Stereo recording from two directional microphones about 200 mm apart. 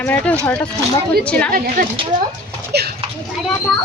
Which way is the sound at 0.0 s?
5° left (ahead or behind).